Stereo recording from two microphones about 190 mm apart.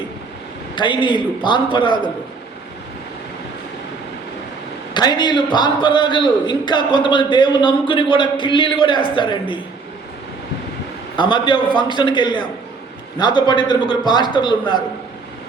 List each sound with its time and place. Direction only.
0.8 s a man's voice: 25° left (ahead or behind)
4.9 s a man's voice: 20° left (ahead or behind)
11.2 s a man's voice: 25° left (ahead or behind)